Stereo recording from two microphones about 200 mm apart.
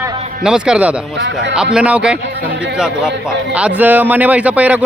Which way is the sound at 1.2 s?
65° right (ahead or behind).